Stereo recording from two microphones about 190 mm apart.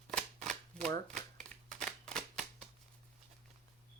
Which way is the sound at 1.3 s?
5° left (ahead or behind).